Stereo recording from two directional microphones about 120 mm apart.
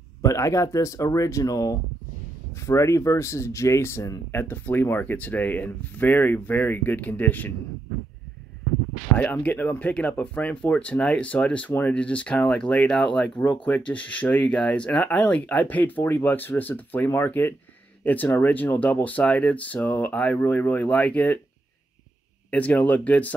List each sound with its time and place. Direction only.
0.2 s speech: 25° left (ahead or behind)
9.2 s speech: 15° left (ahead or behind)
22.5 s speech: 10° left (ahead or behind)